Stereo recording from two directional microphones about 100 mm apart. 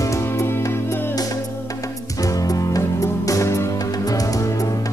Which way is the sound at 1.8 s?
35° left (ahead or behind).